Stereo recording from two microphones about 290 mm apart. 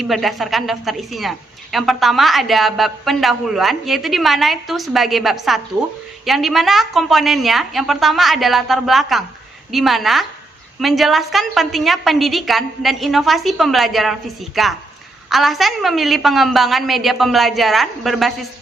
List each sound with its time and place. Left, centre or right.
0.0 s a woman's voice: centre